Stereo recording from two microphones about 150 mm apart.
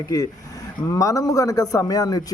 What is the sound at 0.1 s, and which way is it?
A man's voice, 25° left (ahead or behind).